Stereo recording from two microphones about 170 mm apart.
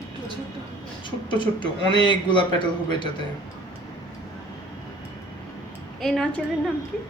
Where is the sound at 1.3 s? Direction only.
30° left (ahead or behind).